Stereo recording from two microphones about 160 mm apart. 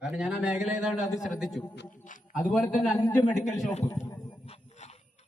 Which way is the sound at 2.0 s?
55° left (ahead or behind).